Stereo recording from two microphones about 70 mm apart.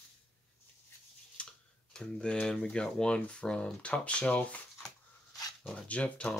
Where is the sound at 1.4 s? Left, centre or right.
Centre.